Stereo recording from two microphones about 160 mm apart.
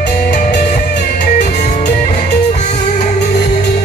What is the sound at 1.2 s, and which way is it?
Music, 50° left (ahead or behind).